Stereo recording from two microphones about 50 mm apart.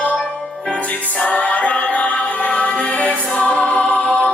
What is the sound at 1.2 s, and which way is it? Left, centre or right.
Music, left.